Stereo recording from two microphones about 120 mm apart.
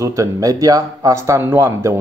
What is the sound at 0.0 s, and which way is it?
A man's voice, 25° right (ahead or behind).